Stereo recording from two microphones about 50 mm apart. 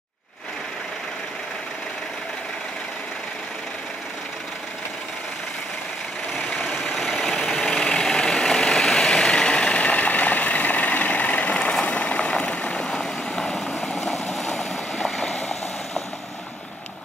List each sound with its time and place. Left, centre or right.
6.8 s vehicle: centre
14.4 s boat: centre